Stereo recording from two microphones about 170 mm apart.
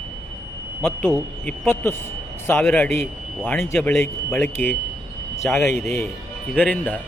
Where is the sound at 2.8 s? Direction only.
10° left (ahead or behind).